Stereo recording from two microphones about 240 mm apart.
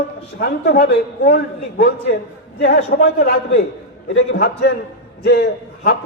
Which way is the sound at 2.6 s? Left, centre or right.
Left.